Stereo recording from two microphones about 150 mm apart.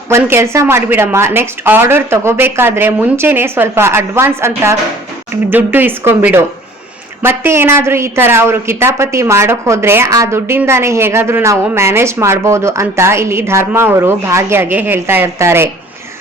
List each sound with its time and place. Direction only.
0.1 s a woman's voice: 15° right (ahead or behind)